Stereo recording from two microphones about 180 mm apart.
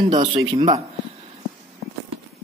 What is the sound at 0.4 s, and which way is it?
Speech, 25° right (ahead or behind).